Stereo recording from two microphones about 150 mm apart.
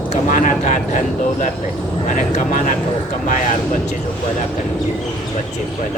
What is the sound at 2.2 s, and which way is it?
Speech, 55° left (ahead or behind).